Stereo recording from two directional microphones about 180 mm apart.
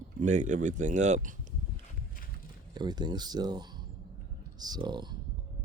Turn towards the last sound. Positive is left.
turn(degrees=-25)  # may be behind; listen again after turning